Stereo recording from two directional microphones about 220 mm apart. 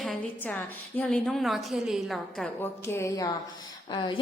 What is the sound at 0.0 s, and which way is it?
A woman's voice, 5° left (ahead or behind).